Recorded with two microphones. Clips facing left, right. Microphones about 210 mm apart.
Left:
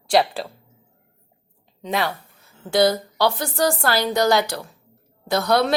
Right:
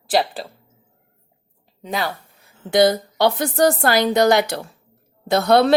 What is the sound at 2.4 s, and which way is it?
Speech, 20° right (ahead or behind).